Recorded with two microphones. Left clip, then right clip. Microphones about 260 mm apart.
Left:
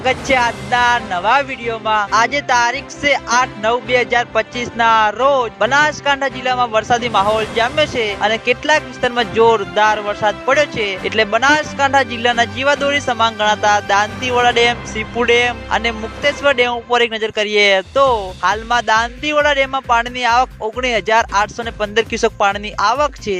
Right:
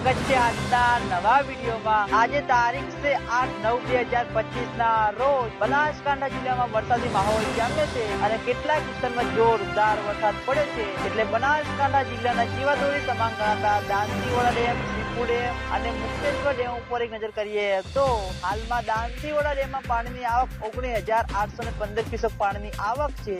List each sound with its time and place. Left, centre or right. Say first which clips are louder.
0.0 s speech: left 7 dB; left
15.3 s speech: left 13 dB; left